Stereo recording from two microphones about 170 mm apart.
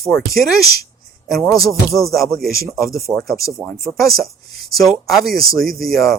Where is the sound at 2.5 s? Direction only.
65° right (ahead or behind).